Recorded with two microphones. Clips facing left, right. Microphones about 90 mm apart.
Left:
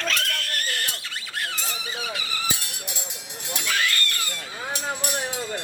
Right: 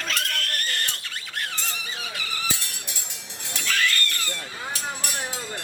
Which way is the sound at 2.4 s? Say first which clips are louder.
Left 1 dB; 15° left (ahead or behind).